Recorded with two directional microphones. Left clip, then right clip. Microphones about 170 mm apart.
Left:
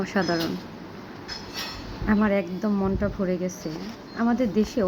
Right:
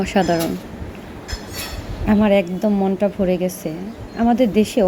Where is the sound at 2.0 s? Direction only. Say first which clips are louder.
Right 8 dB; 20° right (ahead or behind).